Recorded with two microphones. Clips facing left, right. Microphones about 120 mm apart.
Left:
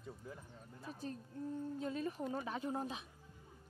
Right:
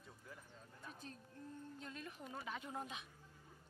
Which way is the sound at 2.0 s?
40° left (ahead or behind).